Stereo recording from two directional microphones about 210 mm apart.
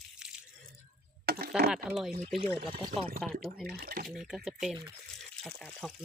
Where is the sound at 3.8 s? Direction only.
45° right (ahead or behind).